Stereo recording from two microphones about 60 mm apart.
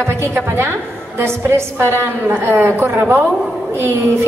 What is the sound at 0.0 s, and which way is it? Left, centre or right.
A woman's voice, right.